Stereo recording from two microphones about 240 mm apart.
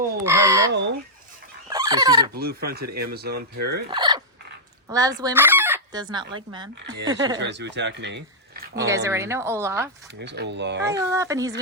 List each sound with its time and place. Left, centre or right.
0.3 s a woman's voice: centre
0.7 s speech: right
1.7 s fowl: centre
2.3 s speech: right
3.8 s a woman's voice: centre
5.2 s chicken: centre
6.3 s a woman's voice: centre
7.3 s speech: right
9.0 s a woman's voice: centre
10.2 s speech: right
10.9 s a woman's voice: centre